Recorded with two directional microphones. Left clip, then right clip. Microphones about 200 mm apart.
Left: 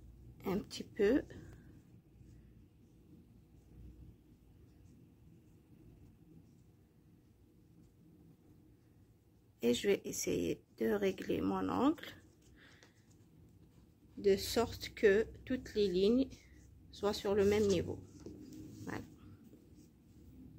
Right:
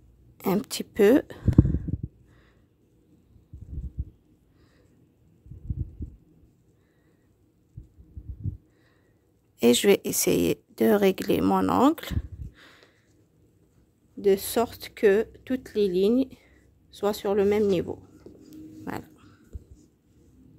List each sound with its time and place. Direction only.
0.4 s speech: 60° right (ahead or behind)
9.6 s speech: 60° right (ahead or behind)
14.2 s speech: 50° right (ahead or behind)
18.3 s a sound: centre (ahead or behind)
18.9 s dog: 55° right (ahead or behind)